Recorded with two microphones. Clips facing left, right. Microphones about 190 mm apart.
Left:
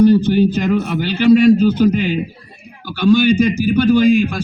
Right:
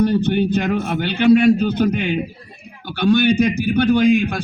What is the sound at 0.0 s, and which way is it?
A man's voice, 60° right (ahead or behind).